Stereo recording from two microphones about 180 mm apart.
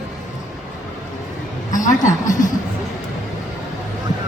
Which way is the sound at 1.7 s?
45° left (ahead or behind).